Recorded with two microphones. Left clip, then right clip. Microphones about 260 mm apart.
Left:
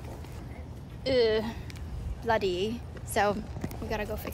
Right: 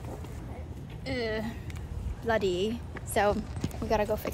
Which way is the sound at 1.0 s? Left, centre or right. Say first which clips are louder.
Left 8 dB; left.